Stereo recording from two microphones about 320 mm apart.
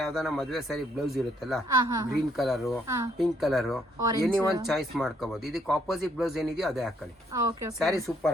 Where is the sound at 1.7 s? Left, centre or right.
Centre.